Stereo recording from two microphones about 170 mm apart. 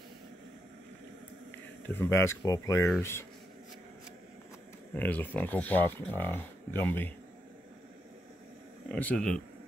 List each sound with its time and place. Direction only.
2.0 s speech: 15° left (ahead or behind)
4.9 s speech: 10° left (ahead or behind)
8.8 s speech: 10° left (ahead or behind)